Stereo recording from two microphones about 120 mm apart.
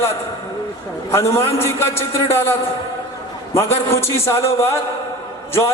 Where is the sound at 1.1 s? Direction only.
20° left (ahead or behind).